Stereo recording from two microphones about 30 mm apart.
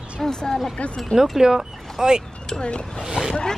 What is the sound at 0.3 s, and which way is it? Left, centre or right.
Speech, left.